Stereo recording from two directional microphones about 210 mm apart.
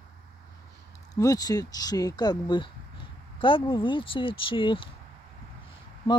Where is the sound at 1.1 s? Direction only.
15° left (ahead or behind).